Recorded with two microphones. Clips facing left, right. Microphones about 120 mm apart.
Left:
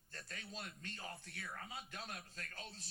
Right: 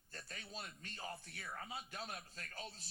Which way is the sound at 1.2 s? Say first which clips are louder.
Right 1 dB; 30° right (ahead or behind).